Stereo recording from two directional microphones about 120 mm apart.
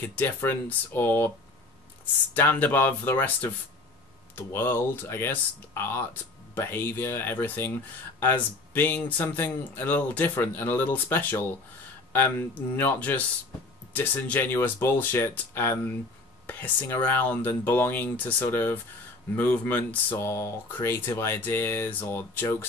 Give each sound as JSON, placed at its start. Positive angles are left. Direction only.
{"t": 0.0, "sound": "speech", "side_deg": 15}
{"t": 2.3, "sound": "speech", "side_deg": 15}